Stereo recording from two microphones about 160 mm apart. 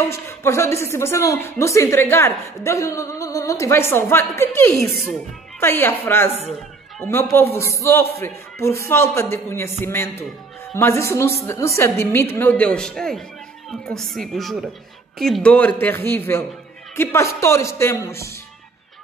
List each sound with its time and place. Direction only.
0.1 s a woman's voice: 15° left (ahead or behind)